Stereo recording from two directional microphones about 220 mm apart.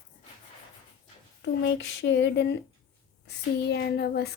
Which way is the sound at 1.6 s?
55° left (ahead or behind).